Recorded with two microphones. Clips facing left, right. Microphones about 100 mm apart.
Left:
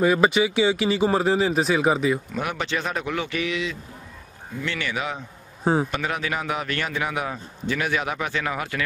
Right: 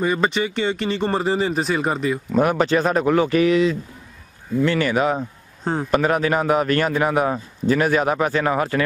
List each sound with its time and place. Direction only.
0.0 s speech: 5° left (ahead or behind)
2.3 s a man's voice: 40° right (ahead or behind)
5.6 s a man's voice: 10° left (ahead or behind)
5.9 s a man's voice: 40° right (ahead or behind)